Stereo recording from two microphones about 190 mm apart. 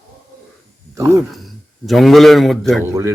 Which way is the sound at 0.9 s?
15° right (ahead or behind).